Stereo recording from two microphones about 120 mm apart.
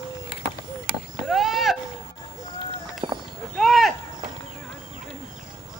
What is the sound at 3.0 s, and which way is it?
Clip-clop, 45° right (ahead or behind).